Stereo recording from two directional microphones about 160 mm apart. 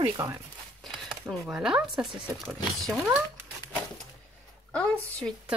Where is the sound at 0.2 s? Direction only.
20° right (ahead or behind).